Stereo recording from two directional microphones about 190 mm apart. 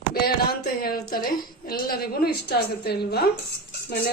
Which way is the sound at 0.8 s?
50° left (ahead or behind).